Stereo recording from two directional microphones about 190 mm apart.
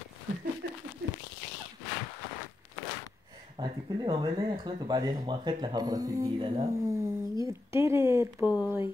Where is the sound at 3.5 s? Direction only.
20° right (ahead or behind).